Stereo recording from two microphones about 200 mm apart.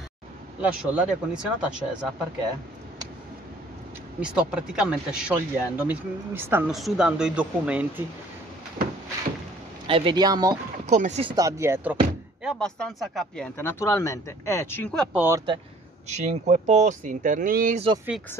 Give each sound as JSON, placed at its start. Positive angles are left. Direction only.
{"t": 0.6, "sound": "speech", "side_deg": -5}
{"t": 4.2, "sound": "speech", "side_deg": -5}
{"t": 9.8, "sound": "speech", "side_deg": -25}
{"t": 10.9, "sound": "speech", "side_deg": -35}
{"t": 11.3, "sound": "speech", "side_deg": -15}
{"t": 12.4, "sound": "speech", "side_deg": 5}
{"t": 15.1, "sound": "speech", "side_deg": -10}
{"t": 16.1, "sound": "speech", "side_deg": -35}
{"t": 17.7, "sound": "speech", "side_deg": -30}